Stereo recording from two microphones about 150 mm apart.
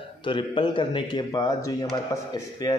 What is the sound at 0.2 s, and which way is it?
A man's voice, 35° left (ahead or behind).